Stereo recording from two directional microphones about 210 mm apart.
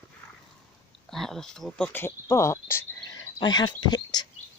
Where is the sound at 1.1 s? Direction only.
Centre (ahead or behind).